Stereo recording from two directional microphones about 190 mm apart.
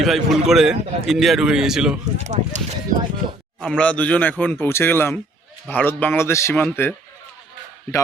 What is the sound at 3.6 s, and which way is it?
Speech, 5° left (ahead or behind).